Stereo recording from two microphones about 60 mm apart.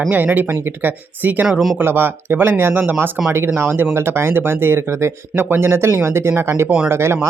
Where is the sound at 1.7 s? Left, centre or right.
Right.